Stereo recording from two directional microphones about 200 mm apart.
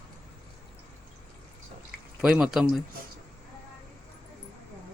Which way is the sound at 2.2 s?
5° right (ahead or behind).